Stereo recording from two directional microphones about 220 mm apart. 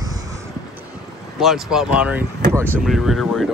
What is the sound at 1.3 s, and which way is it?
Speech, centre (ahead or behind).